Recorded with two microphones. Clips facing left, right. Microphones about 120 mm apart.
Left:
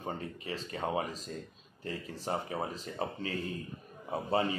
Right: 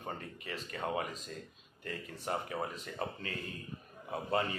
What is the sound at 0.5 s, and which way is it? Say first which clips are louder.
Speech: left 2 dB; 30° left (ahead or behind).